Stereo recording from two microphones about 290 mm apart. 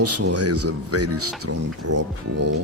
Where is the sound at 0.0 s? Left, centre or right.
Right.